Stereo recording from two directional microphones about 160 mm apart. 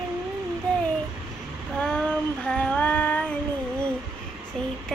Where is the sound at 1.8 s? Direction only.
5° left (ahead or behind).